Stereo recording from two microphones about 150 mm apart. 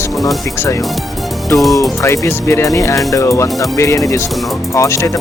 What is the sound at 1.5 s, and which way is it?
Speech, centre (ahead or behind).